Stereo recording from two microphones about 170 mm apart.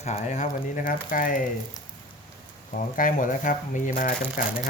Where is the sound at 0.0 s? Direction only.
45° left (ahead or behind).